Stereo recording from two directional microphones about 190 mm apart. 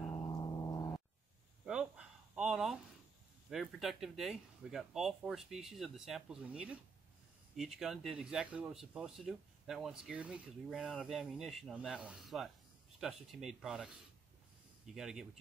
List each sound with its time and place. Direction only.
0.1 s gong: 20° left (ahead or behind)
1.7 s a sound: 5° right (ahead or behind)
3.4 s speech: centre (ahead or behind)
14.9 s speech: centre (ahead or behind)